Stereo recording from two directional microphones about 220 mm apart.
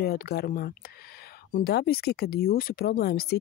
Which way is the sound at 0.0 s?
45° left (ahead or behind).